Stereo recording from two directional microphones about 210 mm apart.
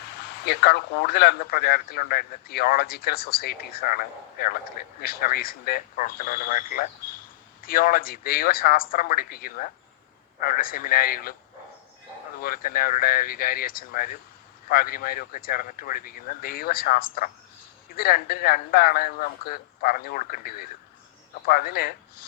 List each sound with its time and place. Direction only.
0.4 s speech: 50° left (ahead or behind)
12.4 s speech: 45° left (ahead or behind)